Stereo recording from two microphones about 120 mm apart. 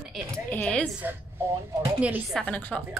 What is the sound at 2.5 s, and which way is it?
Speech, 15° left (ahead or behind).